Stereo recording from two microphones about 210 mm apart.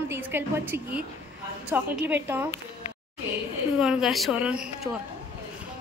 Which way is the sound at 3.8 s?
Centre (ahead or behind).